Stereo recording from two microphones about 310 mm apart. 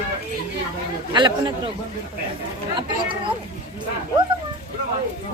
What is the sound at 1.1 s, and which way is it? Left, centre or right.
Speech, centre.